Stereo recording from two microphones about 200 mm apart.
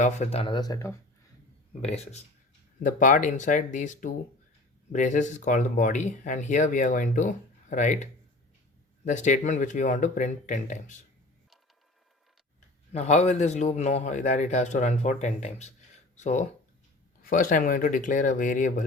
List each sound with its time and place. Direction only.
0.0 s speech: 35° left (ahead or behind); by 0.9 s 15° left (ahead or behind)
1.8 s speech: 30° left (ahead or behind)
9.0 s speech: 35° left (ahead or behind)
12.9 s speech: 35° left (ahead or behind)